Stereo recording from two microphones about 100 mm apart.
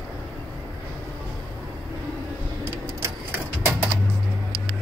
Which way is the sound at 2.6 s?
25° right (ahead or behind).